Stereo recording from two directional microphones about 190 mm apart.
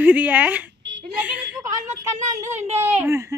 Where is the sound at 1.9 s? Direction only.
40° right (ahead or behind).